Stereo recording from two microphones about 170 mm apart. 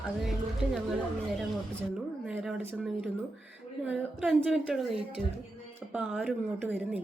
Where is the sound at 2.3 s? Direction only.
5° right (ahead or behind).